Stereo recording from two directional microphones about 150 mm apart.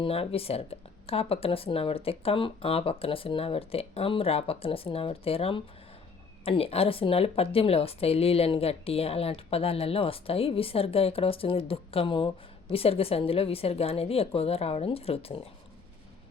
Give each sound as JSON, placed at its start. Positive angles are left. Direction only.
{"t": 0.0, "sound": "a woman's voice", "side_deg": 40}